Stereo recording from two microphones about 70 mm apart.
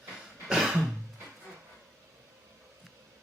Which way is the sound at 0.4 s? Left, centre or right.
Centre.